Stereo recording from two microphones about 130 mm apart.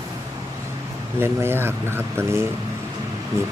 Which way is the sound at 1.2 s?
20° right (ahead or behind).